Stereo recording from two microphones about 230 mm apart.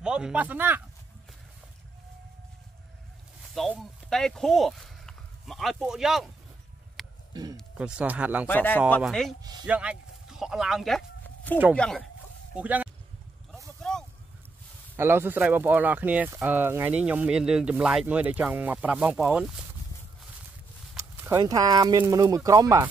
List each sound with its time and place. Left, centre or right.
0.0 s speech: centre
3.5 s speech: centre
7.0 s a sound: centre
7.5 s speech: centre
8.5 s speech: centre
9.4 s speech: centre
9.7 s speech: centre
15.0 s speech: centre
20.9 s speech: centre